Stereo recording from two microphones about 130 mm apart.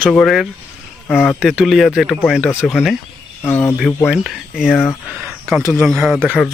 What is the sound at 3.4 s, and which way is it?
Speech, 15° left (ahead or behind).